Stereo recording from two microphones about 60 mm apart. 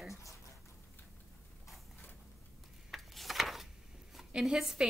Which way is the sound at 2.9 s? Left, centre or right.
Centre.